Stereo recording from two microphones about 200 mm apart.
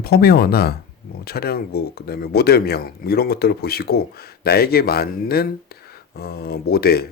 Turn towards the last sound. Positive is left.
turn(degrees=50)  # may be behind; listen again after turning